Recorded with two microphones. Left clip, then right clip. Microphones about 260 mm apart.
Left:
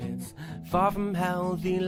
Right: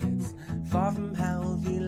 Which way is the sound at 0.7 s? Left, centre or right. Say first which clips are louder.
Left 5 dB; left.